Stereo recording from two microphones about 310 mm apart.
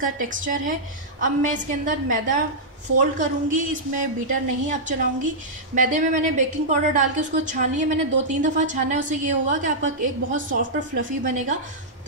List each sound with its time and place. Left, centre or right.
0.0 s a woman's voice: right